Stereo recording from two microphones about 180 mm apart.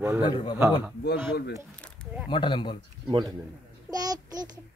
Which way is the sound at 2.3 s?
25° left (ahead or behind).